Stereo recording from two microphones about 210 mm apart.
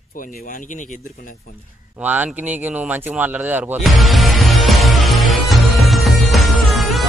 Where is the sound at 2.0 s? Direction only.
10° right (ahead or behind).